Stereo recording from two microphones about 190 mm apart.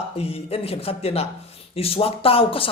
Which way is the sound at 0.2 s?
30° left (ahead or behind).